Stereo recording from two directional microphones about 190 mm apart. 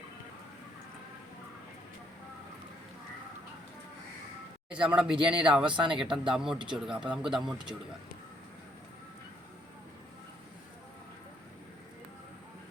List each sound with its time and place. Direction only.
4.7 s speech: 5° right (ahead or behind)
5.6 s speech: 25° right (ahead or behind)
6.0 s speech: 5° right (ahead or behind)